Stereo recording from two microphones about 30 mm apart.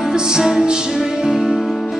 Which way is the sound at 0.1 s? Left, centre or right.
Right.